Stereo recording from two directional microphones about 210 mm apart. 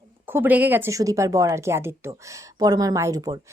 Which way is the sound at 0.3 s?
10° right (ahead or behind).